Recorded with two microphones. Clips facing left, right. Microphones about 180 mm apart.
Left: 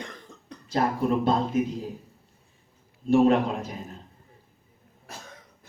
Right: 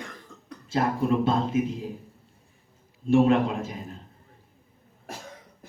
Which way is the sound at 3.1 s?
40° left (ahead or behind).